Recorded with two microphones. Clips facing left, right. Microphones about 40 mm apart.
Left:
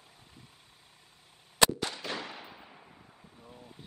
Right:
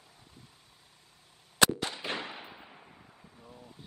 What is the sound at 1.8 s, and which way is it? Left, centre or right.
Fireworks, centre.